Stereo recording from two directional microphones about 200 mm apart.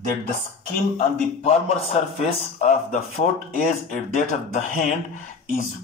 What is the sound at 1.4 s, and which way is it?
A man's voice, 30° left (ahead or behind).